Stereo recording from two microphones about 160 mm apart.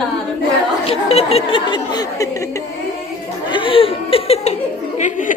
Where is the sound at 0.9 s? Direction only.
40° left (ahead or behind).